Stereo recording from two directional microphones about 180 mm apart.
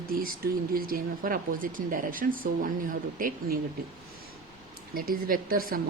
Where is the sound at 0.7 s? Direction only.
55° right (ahead or behind).